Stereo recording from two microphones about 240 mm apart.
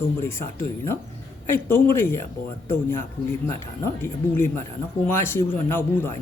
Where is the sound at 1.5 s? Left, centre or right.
Centre.